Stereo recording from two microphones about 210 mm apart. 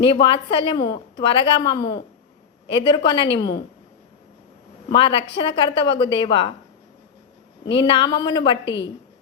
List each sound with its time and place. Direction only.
0.0 s a woman's voice: 25° left (ahead or behind)
4.9 s a woman's voice: 25° left (ahead or behind)
7.9 s a woman's voice: 25° left (ahead or behind)
8.6 s a woman's voice: 60° left (ahead or behind)